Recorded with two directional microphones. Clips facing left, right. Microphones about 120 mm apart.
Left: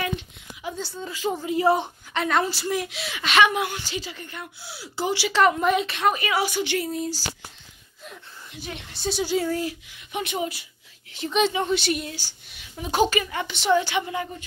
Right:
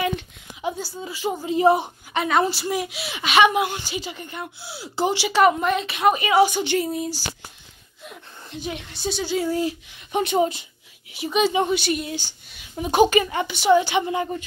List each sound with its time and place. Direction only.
0.9 s a woman's voice: 10° right (ahead or behind)
1.4 s a woman's voice: 20° right (ahead or behind)
5.6 s speech: 5° left (ahead or behind)
5.9 s a woman's voice: 10° right (ahead or behind)
6.1 s a woman's voice: 20° right (ahead or behind)
6.9 s a woman's voice: 15° right (ahead or behind)
8.6 s a woman's voice: 20° right (ahead or behind)
9.0 s speech: 5° left (ahead or behind)
9.5 s a woman's voice: 25° right (ahead or behind)
10.1 s a woman's voice: 35° right (ahead or behind)
11.1 s a woman's voice: 5° right (ahead or behind)
12.1 s a woman's voice: 20° right (ahead or behind)
14.0 s a woman's voice: 25° right (ahead or behind)